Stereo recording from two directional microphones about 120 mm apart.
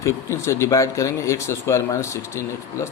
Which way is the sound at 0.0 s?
25° left (ahead or behind).